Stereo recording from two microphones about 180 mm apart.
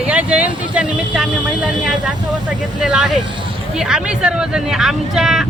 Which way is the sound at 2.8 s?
5° right (ahead or behind).